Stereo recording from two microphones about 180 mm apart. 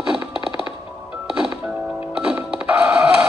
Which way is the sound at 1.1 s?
5° right (ahead or behind).